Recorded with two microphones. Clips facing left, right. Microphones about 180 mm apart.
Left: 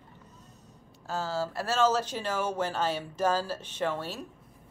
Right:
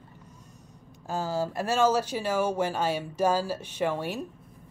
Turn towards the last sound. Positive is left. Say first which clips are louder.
# right 3 dB
turn(degrees=-15)  # may be behind; listen again after turning